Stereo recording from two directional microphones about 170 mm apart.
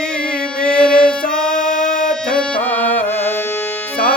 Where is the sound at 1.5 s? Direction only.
50° left (ahead or behind).